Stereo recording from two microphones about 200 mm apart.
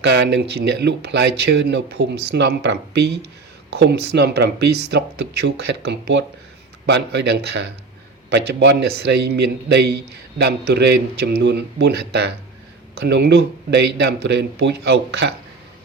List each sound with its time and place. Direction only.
0.0 s a man's voice: 60° right (ahead or behind)